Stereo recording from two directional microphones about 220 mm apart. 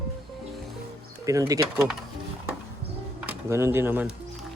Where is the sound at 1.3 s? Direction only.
15° right (ahead or behind).